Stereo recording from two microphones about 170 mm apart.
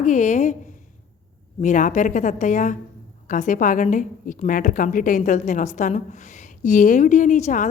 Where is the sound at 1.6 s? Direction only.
50° left (ahead or behind).